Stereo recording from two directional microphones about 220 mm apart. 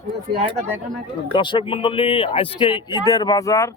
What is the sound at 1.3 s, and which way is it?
Speech, 20° left (ahead or behind).